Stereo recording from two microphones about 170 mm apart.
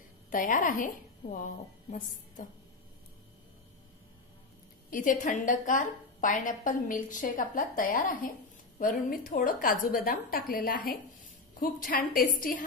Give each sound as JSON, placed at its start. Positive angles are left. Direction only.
{"t": 0.3, "sound": "a woman's voice", "side_deg": 50}
{"t": 4.9, "sound": "a woman's voice", "side_deg": 50}